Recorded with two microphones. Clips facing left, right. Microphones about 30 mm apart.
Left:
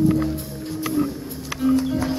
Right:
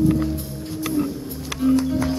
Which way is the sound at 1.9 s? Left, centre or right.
Centre.